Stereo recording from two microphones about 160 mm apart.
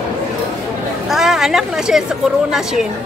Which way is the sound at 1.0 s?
Centre (ahead or behind).